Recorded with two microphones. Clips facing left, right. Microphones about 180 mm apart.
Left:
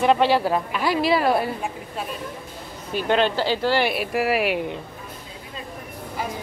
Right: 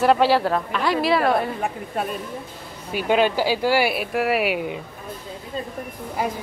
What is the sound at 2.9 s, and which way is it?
Speech, 10° right (ahead or behind).